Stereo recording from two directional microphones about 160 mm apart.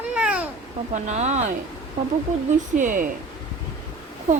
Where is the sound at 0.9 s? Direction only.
50° right (ahead or behind).